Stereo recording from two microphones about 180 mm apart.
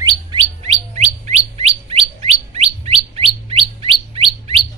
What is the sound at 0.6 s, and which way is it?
Bird, 35° right (ahead or behind).